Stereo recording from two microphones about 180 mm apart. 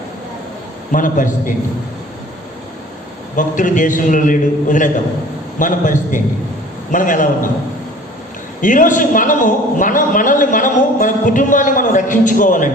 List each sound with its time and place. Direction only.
0.9 s a man's voice: 45° left (ahead or behind)
3.3 s a man's voice: 45° left (ahead or behind)
8.6 s a man's voice: 45° left (ahead or behind)